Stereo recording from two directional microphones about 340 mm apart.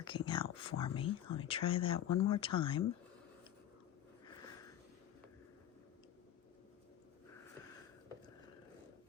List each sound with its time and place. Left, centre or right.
0.0 s speech: centre
1.9 s speech: left
2.6 s speech: centre